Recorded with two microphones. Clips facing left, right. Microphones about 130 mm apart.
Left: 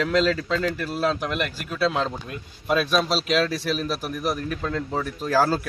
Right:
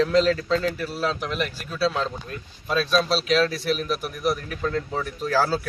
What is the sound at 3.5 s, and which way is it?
Speech, 40° left (ahead or behind).